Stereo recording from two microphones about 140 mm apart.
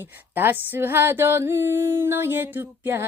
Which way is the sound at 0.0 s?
15° right (ahead or behind).